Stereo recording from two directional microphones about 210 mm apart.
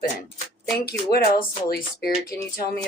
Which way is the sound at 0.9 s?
50° left (ahead or behind).